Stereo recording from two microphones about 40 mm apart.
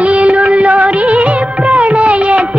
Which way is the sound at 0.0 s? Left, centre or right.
Right.